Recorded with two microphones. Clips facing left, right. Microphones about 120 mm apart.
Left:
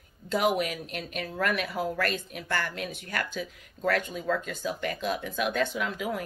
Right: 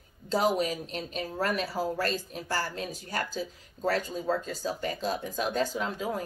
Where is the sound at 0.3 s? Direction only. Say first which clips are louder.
Even; 30° right (ahead or behind).